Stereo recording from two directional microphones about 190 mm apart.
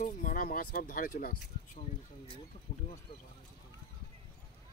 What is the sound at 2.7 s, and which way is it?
Speech, 30° left (ahead or behind).